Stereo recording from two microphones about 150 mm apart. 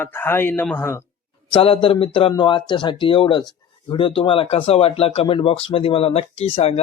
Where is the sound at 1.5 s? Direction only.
35° left (ahead or behind).